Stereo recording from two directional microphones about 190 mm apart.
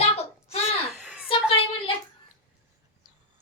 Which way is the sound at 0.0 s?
30° left (ahead or behind).